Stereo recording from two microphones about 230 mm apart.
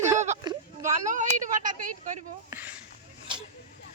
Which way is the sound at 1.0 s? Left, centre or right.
Right.